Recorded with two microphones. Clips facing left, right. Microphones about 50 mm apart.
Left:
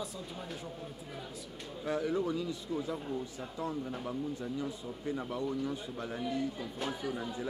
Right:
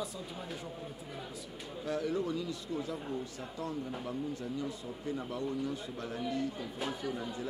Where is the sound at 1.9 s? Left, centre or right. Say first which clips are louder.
Left 1 dB; left.